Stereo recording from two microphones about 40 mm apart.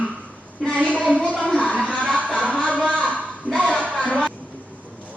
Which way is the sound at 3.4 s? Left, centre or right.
Right.